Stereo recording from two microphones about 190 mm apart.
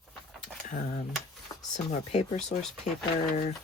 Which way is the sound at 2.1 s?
35° left (ahead or behind).